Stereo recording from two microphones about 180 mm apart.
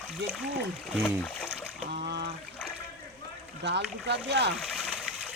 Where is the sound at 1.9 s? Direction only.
65° right (ahead or behind).